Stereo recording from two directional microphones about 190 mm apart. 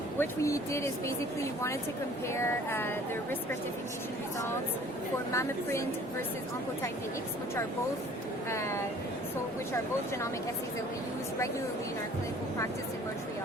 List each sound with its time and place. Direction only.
0.2 s speech: 15° left (ahead or behind)
2.3 s speech: 15° left (ahead or behind)
5.3 s speech: 15° left (ahead or behind)
8.4 s speech: 15° left (ahead or behind)